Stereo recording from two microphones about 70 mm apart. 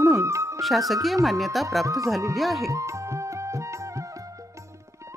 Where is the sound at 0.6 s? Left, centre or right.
Centre.